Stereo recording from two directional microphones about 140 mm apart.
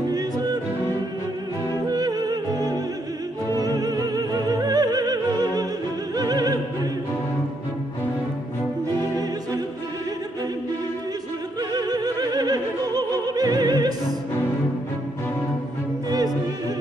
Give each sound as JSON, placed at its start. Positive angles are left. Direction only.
{"t": 1.7, "sound": "music", "side_deg": -30}
{"t": 6.1, "sound": "opera", "side_deg": -30}
{"t": 11.7, "sound": "opera", "side_deg": -30}
{"t": 16.1, "sound": "music", "side_deg": -30}